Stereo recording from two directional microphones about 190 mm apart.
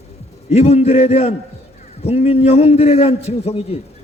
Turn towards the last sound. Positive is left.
turn(degrees=35)  # may be behind; listen again after turning